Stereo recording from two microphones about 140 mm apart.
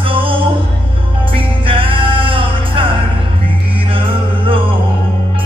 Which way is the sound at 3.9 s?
40° right (ahead or behind).